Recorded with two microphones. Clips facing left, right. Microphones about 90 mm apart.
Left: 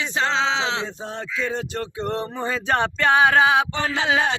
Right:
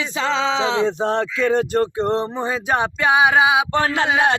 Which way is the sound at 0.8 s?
75° right (ahead or behind).